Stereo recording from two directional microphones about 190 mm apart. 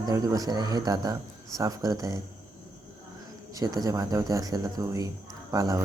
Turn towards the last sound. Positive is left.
turn(degrees=-15)  # may be behind; listen again after turning